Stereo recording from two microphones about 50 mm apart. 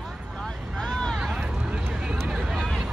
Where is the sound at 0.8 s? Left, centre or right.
Centre.